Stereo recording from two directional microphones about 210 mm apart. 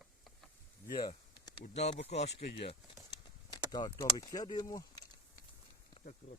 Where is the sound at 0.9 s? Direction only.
20° left (ahead or behind).